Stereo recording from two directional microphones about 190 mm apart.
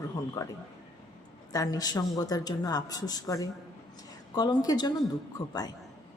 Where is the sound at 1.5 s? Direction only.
20° left (ahead or behind).